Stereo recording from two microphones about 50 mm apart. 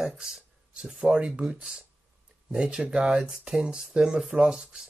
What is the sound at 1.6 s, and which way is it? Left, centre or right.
Speech, centre.